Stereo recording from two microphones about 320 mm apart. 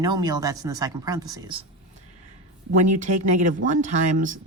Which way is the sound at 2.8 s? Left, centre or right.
Right.